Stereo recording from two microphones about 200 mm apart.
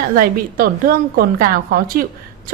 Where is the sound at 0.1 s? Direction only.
50° right (ahead or behind).